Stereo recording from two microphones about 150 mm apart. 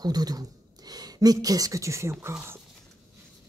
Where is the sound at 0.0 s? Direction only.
25° right (ahead or behind).